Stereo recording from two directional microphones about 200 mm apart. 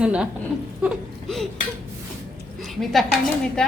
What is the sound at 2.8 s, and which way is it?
Speech, centre (ahead or behind).